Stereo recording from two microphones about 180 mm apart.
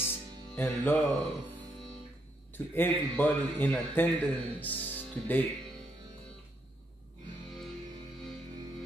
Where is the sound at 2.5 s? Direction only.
10° left (ahead or behind).